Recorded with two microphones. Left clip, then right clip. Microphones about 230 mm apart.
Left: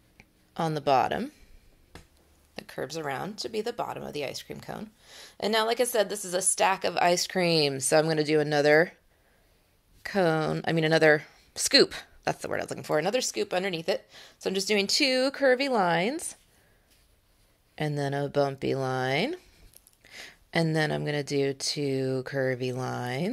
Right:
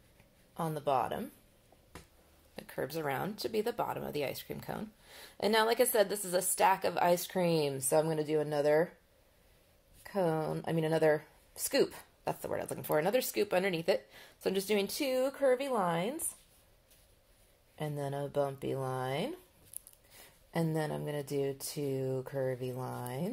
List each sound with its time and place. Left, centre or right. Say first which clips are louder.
0.6 s speech: left 8 dB; left
2.5 s speech: left 3 dB; centre; by 8.9 s left
10.0 s speech: left 7 dB; left
17.7 s speech: left 8 dB; left
20.2 s speech: left 8 dB; left